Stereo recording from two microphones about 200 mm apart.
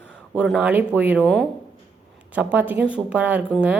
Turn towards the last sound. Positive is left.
turn(degrees=-5)  # may be behind; listen again after turning